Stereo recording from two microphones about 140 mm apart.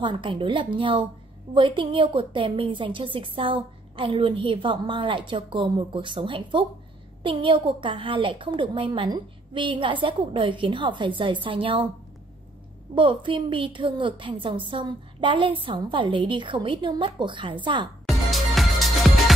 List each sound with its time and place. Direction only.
0.0 s a woman's voice: 35° right (ahead or behind)
12.9 s a woman's voice: 35° right (ahead or behind)
18.0 s music: centre (ahead or behind)